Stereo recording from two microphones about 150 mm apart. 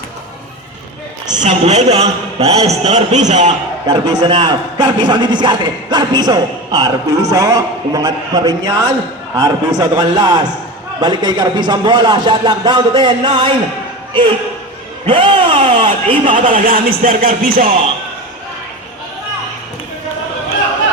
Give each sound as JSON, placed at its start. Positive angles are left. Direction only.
{"t": 1.4, "sound": "a man's voice", "side_deg": -45}
{"t": 3.8, "sound": "a man's voice", "side_deg": -25}
{"t": 16.3, "sound": "music", "side_deg": -60}